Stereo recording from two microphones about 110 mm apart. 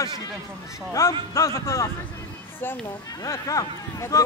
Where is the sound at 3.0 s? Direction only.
35° left (ahead or behind).